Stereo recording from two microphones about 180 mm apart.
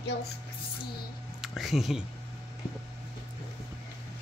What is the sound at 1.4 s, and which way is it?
Speech, centre (ahead or behind).